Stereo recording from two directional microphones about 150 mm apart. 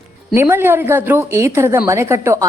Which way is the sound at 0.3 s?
15° right (ahead or behind).